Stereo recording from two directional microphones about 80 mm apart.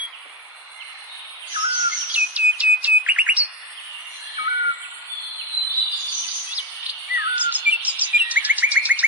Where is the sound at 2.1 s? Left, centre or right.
Centre.